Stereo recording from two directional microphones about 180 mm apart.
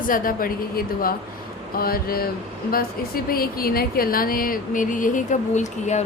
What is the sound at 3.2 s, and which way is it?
Speech, 55° left (ahead or behind).